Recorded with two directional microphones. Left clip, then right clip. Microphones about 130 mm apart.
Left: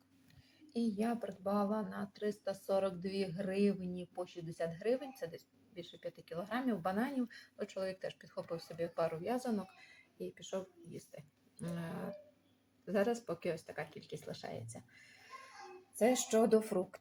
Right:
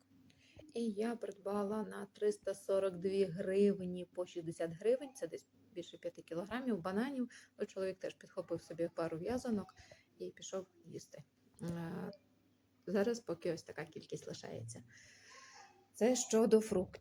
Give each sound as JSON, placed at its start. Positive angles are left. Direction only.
{"t": 0.7, "sound": "speech", "side_deg": -20}
{"t": 16.0, "sound": "speech", "side_deg": -15}